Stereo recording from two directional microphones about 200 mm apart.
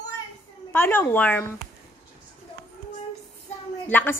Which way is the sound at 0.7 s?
10° left (ahead or behind).